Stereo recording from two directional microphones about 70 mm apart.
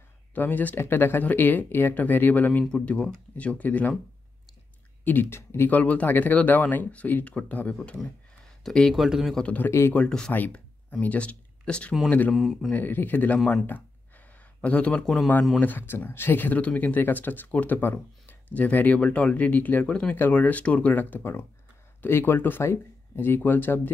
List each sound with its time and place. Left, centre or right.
0.3 s speech: left
5.0 s speech: left
5.7 s speech: left
8.6 s speech: centre
9.4 s speech: left
9.7 s speech: left
9.9 s speech: centre
10.3 s speech: left
12.4 s speech: centre
12.7 s speech: left
13.7 s a sound: left
15.6 s speech: left